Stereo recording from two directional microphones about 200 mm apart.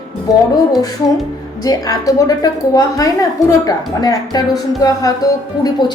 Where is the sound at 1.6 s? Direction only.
20° left (ahead or behind).